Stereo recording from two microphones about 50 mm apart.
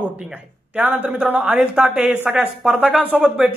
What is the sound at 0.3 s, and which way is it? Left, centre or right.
Speech, right.